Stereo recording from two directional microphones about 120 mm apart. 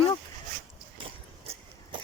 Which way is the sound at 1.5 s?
60° right (ahead or behind).